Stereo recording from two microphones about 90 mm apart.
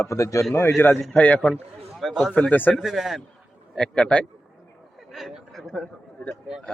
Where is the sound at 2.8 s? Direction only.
Centre (ahead or behind).